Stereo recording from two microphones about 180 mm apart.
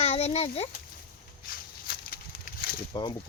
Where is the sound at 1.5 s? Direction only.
55° left (ahead or behind).